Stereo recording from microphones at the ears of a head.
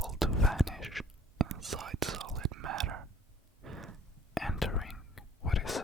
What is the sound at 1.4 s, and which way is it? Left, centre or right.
Whispering, right.